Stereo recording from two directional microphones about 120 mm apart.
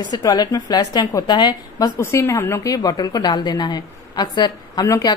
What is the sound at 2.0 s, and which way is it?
Speech, 20° left (ahead or behind).